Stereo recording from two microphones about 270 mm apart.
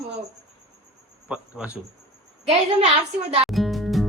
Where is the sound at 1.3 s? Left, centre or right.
Centre.